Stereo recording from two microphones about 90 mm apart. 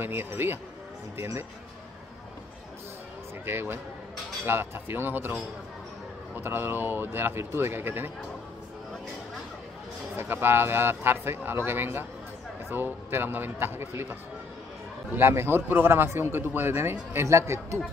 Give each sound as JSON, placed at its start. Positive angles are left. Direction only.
{"t": 0.0, "sound": "speech", "side_deg": -25}
{"t": 3.4, "sound": "speech", "side_deg": -25}
{"t": 10.1, "sound": "speech", "side_deg": -25}
{"t": 15.1, "sound": "speech", "side_deg": -25}